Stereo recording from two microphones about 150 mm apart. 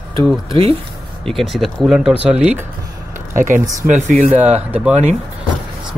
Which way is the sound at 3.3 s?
60° right (ahead or behind).